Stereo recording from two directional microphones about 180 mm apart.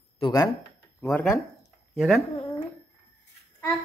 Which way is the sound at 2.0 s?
Centre (ahead or behind).